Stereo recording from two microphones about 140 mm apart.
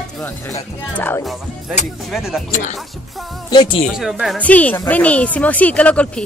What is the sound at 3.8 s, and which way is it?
Speech, centre (ahead or behind).